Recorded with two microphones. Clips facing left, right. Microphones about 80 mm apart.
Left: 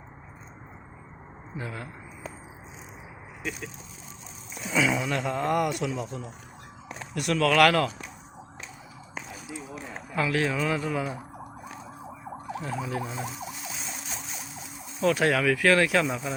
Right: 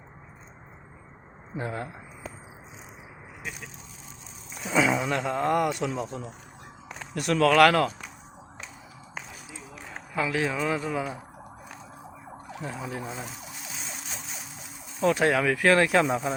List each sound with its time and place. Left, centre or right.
1.5 s speech: right
4.7 s speech: right
5.5 s speech: right
10.2 s speech: centre
12.6 s speech: centre
15.0 s speech: right